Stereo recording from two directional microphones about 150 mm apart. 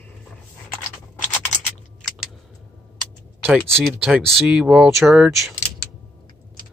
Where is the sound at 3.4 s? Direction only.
5° left (ahead or behind).